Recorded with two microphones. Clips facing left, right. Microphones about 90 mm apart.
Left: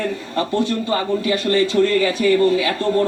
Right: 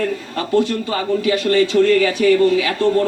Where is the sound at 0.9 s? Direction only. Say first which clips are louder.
Right 2 dB; 35° left (ahead or behind).